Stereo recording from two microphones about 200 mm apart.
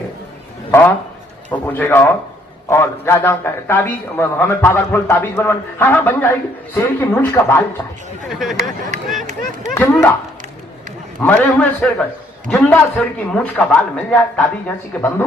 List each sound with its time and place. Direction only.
0.7 s a man's voice: 10° left (ahead or behind)
8.3 s a man's voice: centre (ahead or behind)
8.9 s speech: 35° right (ahead or behind)
9.7 s a man's voice: 15° left (ahead or behind)
11.2 s a man's voice: 10° left (ahead or behind)